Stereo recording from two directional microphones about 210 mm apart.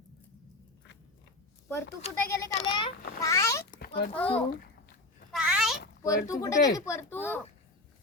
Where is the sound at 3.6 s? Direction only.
45° left (ahead or behind).